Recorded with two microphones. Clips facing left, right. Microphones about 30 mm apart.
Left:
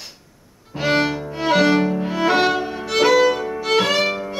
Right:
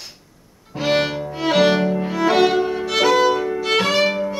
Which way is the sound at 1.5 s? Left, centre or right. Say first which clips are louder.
Even; centre.